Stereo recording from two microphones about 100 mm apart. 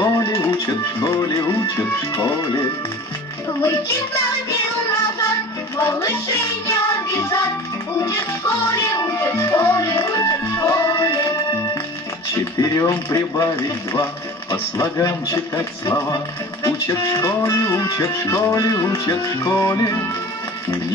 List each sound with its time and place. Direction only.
0.0 s music: 30° left (ahead or behind)
1.5 s speech: 30° left (ahead or behind)
3.6 s music: 30° left (ahead or behind)
5.8 s speech: 25° left (ahead or behind)
6.7 s music: 30° left (ahead or behind)
8.7 s music: 30° left (ahead or behind)
14.5 s music: 35° left (ahead or behind)
16.6 s speech: 30° left (ahead or behind)
17.2 s music: 30° left (ahead or behind)
19.5 s speech: 25° left (ahead or behind)